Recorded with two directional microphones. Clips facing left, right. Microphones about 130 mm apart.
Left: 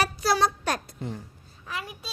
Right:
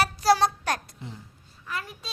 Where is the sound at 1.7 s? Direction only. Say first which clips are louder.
Right 1 dB; 15° left (ahead or behind).